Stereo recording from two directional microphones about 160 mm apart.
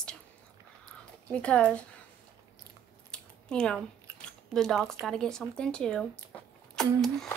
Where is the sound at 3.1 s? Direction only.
5° left (ahead or behind).